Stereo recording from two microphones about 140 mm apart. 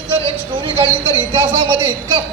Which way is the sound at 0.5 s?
40° right (ahead or behind).